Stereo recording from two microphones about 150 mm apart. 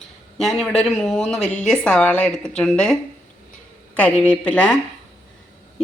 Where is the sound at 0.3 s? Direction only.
Centre (ahead or behind).